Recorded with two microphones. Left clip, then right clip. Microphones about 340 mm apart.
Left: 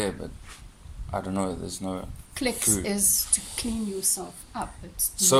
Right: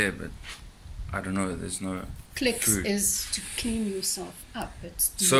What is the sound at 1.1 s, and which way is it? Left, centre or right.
A woman's voice, centre.